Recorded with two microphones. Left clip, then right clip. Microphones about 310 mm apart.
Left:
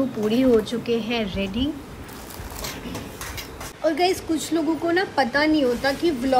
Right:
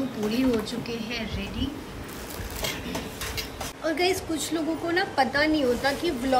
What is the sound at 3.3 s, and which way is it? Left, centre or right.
Speech, centre.